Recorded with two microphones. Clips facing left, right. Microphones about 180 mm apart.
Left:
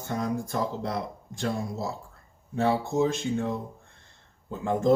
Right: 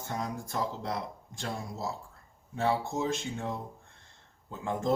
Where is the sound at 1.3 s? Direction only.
55° left (ahead or behind).